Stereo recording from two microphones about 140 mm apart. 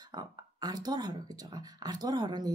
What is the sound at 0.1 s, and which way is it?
Speech, 30° right (ahead or behind).